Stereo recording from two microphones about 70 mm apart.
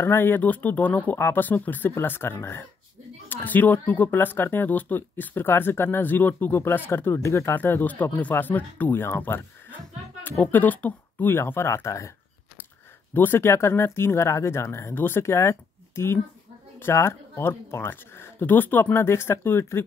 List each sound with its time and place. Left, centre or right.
0.0 s speech: left
13.1 s speech: left